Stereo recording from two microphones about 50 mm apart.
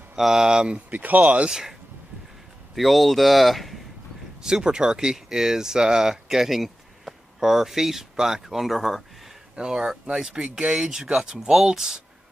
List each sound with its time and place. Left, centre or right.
0.1 s speech: centre
0.9 s speech: right
1.5 s speech: centre
2.7 s speech: centre
4.5 s speech: centre
9.6 s speech: centre